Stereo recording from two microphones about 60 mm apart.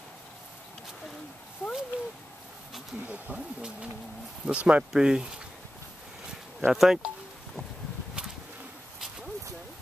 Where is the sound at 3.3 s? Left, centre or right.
Centre.